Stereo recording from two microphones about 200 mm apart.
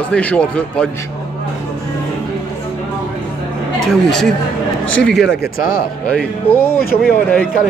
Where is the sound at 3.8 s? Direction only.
Centre (ahead or behind).